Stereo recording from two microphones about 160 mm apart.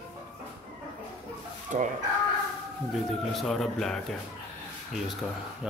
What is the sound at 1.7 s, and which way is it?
Speech, 50° right (ahead or behind).